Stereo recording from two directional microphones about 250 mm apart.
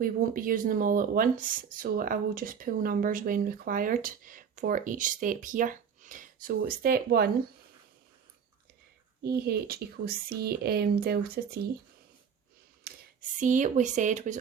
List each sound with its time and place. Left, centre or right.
0.0 s speech: right
9.2 s speech: right
12.9 s a sound: right
13.4 s speech: right